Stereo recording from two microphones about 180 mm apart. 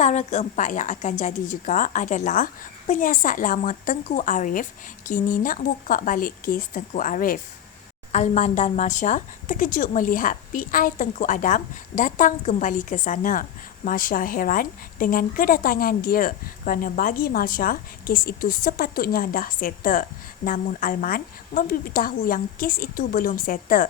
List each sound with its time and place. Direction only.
0.0 s a woman's voice: 40° left (ahead or behind)